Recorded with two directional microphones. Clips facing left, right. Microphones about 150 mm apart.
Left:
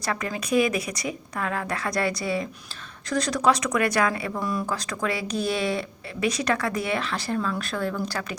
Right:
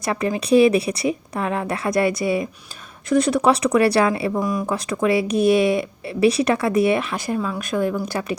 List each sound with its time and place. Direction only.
0.0 s speech: 20° right (ahead or behind)